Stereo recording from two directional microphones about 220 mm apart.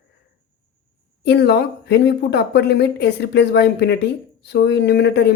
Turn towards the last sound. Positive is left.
turn(degrees=50)  # may be behind; listen again after turning